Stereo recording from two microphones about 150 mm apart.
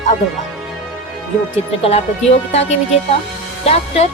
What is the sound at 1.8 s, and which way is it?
A woman's voice, 45° left (ahead or behind).